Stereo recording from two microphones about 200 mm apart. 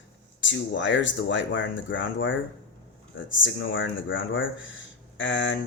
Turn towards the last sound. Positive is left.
turn(degrees=65)  # may be behind; listen again after turning